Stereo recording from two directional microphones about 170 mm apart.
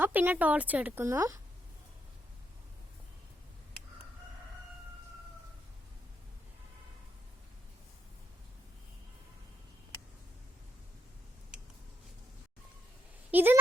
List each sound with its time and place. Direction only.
0.0 s speech: 10° right (ahead or behind)
13.3 s speech: 10° right (ahead or behind)